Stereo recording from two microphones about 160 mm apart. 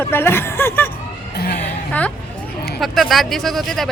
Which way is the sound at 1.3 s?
75° left (ahead or behind).